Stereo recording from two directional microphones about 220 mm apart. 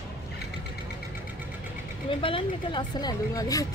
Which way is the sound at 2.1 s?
25° left (ahead or behind).